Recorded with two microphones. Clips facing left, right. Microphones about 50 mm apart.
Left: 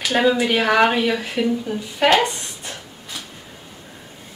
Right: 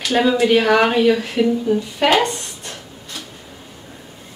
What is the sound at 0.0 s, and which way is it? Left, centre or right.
Speech, centre.